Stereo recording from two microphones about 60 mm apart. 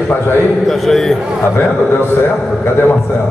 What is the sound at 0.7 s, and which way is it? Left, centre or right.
Speech, centre.